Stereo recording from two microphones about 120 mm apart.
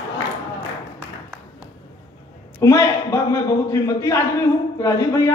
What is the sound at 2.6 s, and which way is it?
A woman's voice, 25° left (ahead or behind).